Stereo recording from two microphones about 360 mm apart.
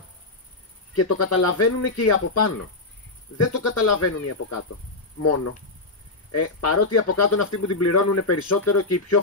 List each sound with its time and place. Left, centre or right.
0.9 s speech: left
6.3 s speech: left